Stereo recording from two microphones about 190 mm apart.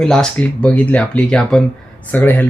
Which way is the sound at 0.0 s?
5° left (ahead or behind).